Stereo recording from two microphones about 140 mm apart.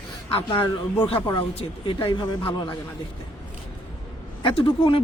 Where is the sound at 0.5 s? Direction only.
15° left (ahead or behind).